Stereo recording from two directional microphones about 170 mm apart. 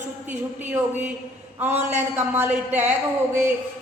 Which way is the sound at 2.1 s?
10° right (ahead or behind).